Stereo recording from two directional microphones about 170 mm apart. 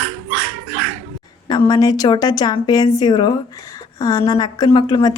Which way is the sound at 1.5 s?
25° left (ahead or behind).